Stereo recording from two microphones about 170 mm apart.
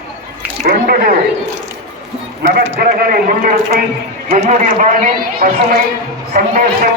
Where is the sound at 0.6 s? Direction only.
60° right (ahead or behind).